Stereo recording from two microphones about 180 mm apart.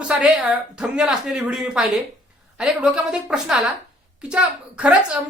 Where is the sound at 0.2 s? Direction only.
Centre (ahead or behind).